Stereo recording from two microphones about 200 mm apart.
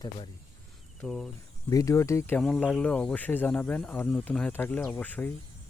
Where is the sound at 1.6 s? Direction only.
15° left (ahead or behind).